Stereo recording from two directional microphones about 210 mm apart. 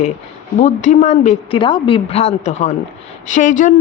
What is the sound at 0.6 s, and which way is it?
A man's voice, 35° left (ahead or behind).